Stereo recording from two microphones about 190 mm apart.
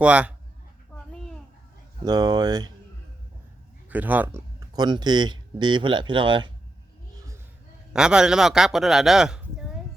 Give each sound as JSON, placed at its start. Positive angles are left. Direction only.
{"t": 0.0, "sound": "a man's voice", "side_deg": -5}
{"t": 2.0, "sound": "speech", "side_deg": -20}
{"t": 3.8, "sound": "speech", "side_deg": -10}
{"t": 7.9, "sound": "speech", "side_deg": -5}